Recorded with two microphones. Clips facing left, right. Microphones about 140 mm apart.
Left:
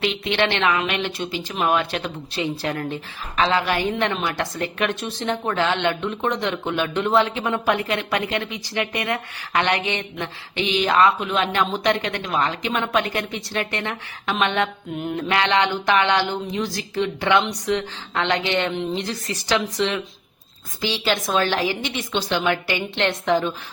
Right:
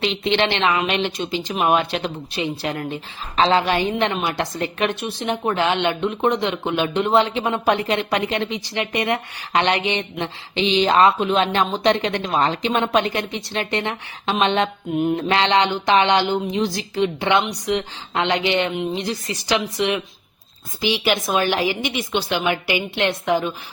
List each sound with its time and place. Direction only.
0.0 s a woman's voice: 25° right (ahead or behind)